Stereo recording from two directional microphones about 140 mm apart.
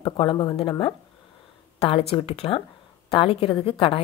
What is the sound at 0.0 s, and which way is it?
A woman's voice, 35° left (ahead or behind).